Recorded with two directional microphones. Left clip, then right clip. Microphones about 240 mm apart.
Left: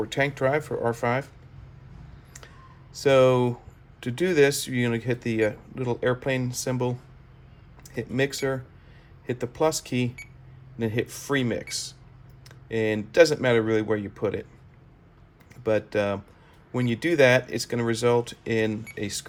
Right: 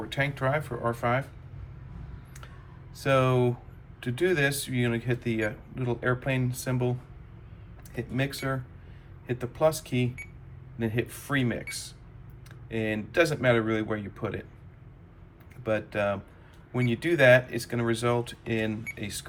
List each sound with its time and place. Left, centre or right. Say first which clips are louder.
0.1 s speech: left 3 dB; left
2.9 s speech: left 6 dB; left
7.9 s speech: left 5 dB; left
15.6 s speech: left 4 dB; left